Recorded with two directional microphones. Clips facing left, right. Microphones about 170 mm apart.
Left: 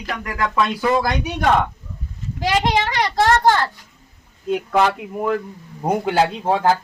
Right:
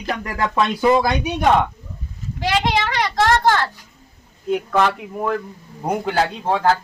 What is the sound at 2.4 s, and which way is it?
Speech, 40° left (ahead or behind).